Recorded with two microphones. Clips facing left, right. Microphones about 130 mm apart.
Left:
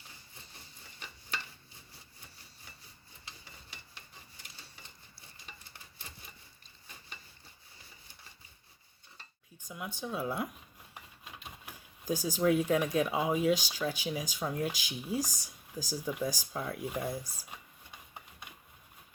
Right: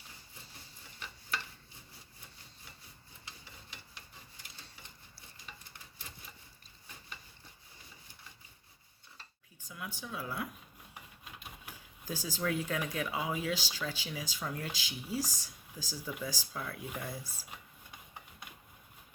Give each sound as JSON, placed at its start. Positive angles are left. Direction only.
{"t": 9.6, "sound": "speech", "side_deg": 20}
{"t": 12.0, "sound": "speech", "side_deg": 15}